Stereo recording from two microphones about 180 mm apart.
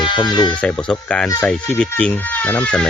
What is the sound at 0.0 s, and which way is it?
Speech, 25° left (ahead or behind).